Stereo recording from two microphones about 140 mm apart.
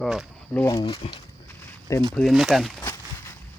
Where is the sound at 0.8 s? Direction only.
40° left (ahead or behind).